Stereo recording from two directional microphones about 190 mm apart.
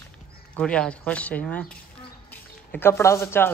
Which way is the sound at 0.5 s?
5° left (ahead or behind).